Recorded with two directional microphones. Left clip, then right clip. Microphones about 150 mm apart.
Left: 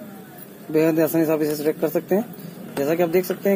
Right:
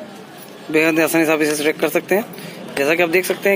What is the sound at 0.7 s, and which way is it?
Speech, 30° right (ahead or behind).